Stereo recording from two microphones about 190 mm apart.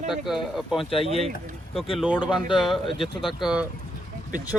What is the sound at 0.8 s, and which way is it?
Speech, 30° left (ahead or behind).